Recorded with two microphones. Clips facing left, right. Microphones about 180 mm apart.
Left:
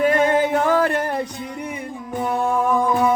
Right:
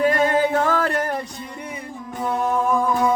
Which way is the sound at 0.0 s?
15° left (ahead or behind).